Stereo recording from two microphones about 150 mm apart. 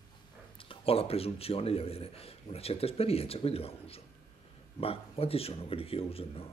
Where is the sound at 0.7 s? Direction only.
40° left (ahead or behind).